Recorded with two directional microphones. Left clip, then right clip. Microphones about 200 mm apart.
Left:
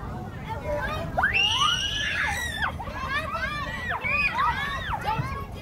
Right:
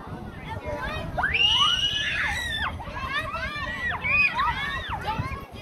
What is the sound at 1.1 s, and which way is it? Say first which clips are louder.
Music: right 1 dB; 60° left (ahead or behind).